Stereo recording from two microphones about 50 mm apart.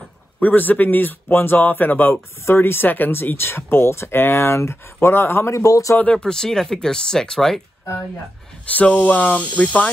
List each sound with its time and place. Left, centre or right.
0.4 s a man's voice: left
2.4 s speech: left
6.1 s speech: centre
8.6 s a man's voice: left